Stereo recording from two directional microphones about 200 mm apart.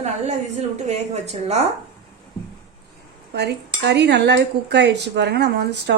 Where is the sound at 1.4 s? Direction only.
30° right (ahead or behind).